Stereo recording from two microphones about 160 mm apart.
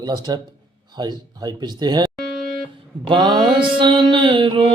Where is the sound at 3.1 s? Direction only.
30° right (ahead or behind).